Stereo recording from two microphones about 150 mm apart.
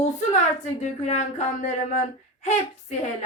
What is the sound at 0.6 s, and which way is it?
Speech, 50° left (ahead or behind).